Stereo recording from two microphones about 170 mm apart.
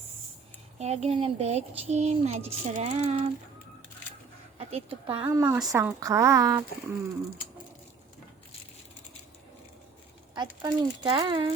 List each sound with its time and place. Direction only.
0.8 s a child's voice: 40° right (ahead or behind)
4.5 s speech: 35° right (ahead or behind)
5.3 s a woman's voice: 15° right (ahead or behind)
10.3 s speech: 25° right (ahead or behind)